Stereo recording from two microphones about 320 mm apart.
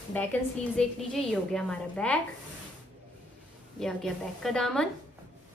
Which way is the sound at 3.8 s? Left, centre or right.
Centre.